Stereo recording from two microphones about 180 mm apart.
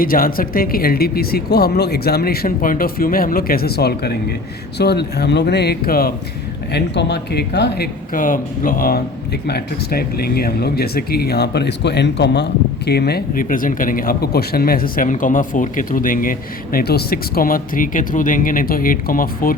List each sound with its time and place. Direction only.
0.0 s speech: 55° left (ahead or behind)
6.7 s speech: 70° left (ahead or behind)
8.1 s speech: 50° left (ahead or behind)